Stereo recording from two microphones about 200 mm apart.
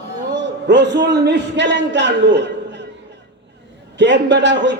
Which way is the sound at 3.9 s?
60° right (ahead or behind).